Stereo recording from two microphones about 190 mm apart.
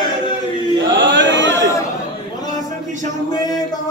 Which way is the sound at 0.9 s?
70° right (ahead or behind).